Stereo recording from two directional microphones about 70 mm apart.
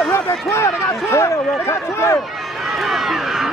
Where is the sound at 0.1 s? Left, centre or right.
Left.